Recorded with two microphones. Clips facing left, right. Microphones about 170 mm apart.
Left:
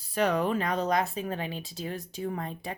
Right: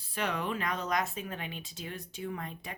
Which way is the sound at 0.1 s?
40° left (ahead or behind).